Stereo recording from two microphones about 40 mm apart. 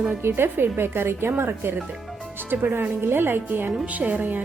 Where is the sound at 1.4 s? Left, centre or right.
Right.